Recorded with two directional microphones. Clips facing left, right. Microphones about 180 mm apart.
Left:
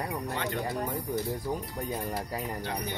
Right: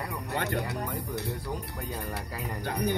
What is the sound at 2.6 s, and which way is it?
Speech, 50° right (ahead or behind).